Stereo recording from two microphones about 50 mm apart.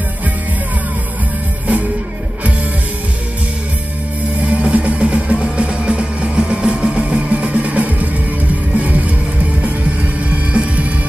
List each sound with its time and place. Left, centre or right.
4.4 s music: right
10.3 s music: right